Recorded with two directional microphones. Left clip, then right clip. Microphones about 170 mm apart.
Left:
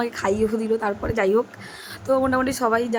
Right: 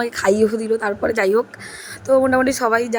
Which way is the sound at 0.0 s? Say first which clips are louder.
Right 6 dB; 25° right (ahead or behind).